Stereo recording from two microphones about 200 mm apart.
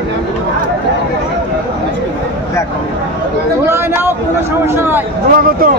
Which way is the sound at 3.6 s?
10° right (ahead or behind).